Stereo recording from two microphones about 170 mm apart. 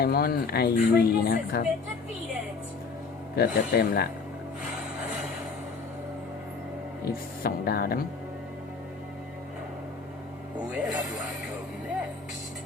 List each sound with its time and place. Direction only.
0.0 s speech: 65° left (ahead or behind)
3.3 s speech: 70° left (ahead or behind)
7.4 s speech: 65° left (ahead or behind)
10.7 s speech: 5° right (ahead or behind)